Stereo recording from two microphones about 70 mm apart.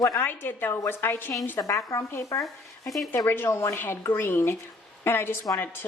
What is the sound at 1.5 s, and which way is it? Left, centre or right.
A woman's voice, left.